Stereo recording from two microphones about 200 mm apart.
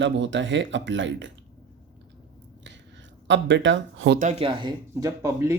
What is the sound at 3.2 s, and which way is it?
Speech, 65° right (ahead or behind).